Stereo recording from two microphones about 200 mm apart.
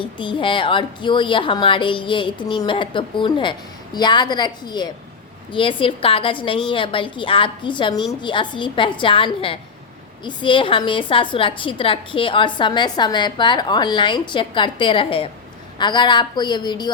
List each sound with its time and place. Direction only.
0.2 s a woman's voice: 25° left (ahead or behind)